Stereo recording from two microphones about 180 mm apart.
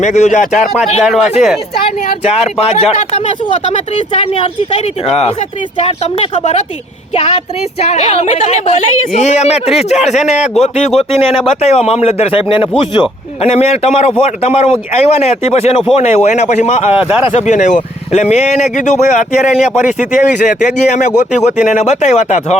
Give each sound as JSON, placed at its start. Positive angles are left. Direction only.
{"t": 0.0, "sound": "speech", "side_deg": 40}
{"t": 1.0, "sound": "speech", "side_deg": 0}
{"t": 2.2, "sound": "a man's voice", "side_deg": 35}
{"t": 7.8, "sound": "a man's voice", "side_deg": 35}
{"t": 16.9, "sound": "speech", "side_deg": -5}
{"t": 17.2, "sound": "a man's voice", "side_deg": 40}